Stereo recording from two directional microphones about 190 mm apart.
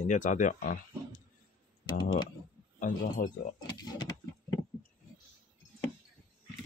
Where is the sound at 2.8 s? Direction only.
45° left (ahead or behind).